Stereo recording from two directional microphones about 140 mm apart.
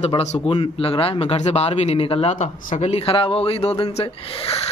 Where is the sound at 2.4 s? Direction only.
55° left (ahead or behind).